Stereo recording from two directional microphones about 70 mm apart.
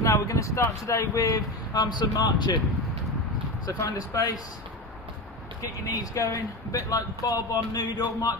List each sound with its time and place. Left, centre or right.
0.0 s speech: left
1.7 s speech: left
4.1 s speech: left
5.6 s speech: left